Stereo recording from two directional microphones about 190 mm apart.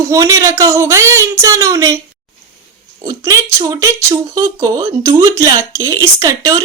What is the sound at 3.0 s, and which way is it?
Speech, 20° right (ahead or behind).